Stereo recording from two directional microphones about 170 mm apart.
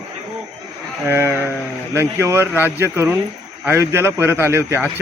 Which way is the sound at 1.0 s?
15° right (ahead or behind).